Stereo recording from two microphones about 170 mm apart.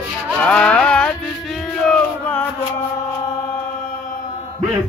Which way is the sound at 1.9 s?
10° left (ahead or behind).